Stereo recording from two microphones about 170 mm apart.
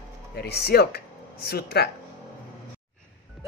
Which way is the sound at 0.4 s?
70° left (ahead or behind).